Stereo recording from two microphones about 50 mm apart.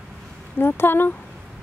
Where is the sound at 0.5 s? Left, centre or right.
Left.